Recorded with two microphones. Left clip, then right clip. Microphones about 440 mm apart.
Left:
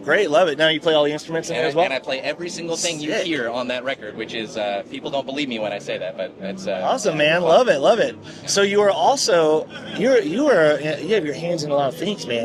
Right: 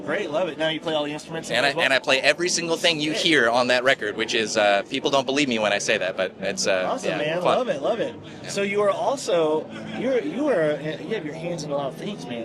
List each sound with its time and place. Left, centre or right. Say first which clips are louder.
0.1 s speech: left 9 dB; left
1.8 s speech: right 2 dB; right
6.8 s speech: left 6 dB; left